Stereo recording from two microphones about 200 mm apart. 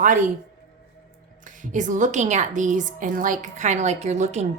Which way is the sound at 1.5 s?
40° right (ahead or behind).